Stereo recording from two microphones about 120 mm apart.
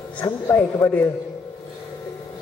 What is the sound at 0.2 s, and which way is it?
Speech, 20° left (ahead or behind).